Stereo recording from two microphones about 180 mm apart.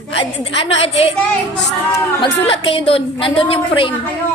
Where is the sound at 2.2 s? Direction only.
30° left (ahead or behind).